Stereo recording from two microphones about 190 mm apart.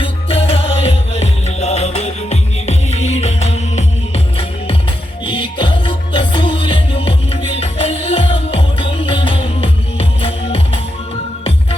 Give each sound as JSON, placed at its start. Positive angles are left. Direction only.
{"t": 0.0, "sound": "music", "side_deg": 30}